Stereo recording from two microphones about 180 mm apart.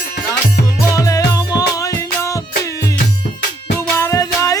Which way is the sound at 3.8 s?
15° left (ahead or behind).